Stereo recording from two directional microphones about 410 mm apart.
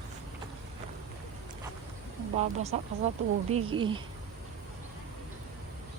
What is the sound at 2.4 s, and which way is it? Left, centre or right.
A woman's voice, centre.